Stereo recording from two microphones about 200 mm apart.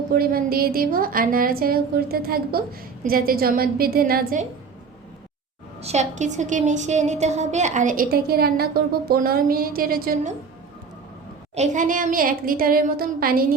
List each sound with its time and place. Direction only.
0.1 s a woman's voice: 50° right (ahead or behind)
5.8 s a woman's voice: 35° right (ahead or behind)
11.5 s a woman's voice: 35° right (ahead or behind)